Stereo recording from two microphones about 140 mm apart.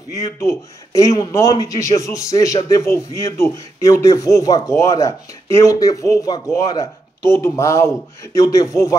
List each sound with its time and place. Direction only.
0.1 s speech: 20° left (ahead or behind)